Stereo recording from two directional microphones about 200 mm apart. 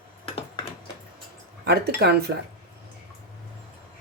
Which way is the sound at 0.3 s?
25° left (ahead or behind).